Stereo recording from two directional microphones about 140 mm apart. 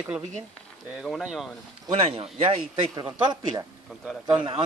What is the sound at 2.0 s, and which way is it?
Speech, 40° right (ahead or behind).